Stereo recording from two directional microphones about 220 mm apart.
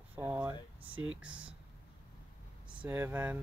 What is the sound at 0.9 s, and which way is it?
Speech, 65° right (ahead or behind).